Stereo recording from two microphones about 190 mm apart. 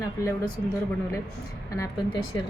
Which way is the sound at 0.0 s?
20° left (ahead or behind).